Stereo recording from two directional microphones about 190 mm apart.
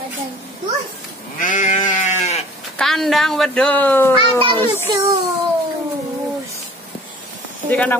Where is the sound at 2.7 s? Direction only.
Centre (ahead or behind).